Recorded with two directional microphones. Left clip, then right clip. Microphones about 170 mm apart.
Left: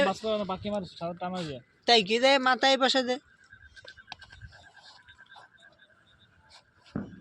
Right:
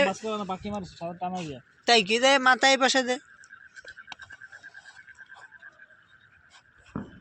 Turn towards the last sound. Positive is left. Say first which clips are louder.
# even
turn(degrees=-45)  # may be behind; listen again after turning